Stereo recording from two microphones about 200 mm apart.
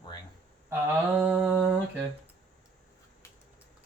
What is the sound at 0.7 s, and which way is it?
Mantra, 10° right (ahead or behind).